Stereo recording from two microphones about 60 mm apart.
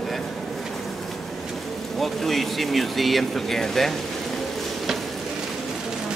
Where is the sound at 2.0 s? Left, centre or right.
Centre.